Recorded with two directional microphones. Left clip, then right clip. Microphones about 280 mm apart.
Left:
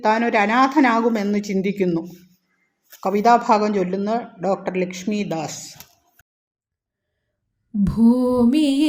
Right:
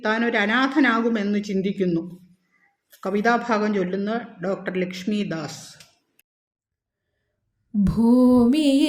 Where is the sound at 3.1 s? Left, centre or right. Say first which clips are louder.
Left 6 dB; centre.